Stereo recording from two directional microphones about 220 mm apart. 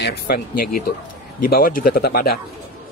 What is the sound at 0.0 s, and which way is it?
Speech, 40° left (ahead or behind).